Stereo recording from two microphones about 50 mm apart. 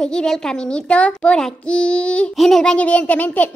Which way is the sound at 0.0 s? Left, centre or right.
Centre.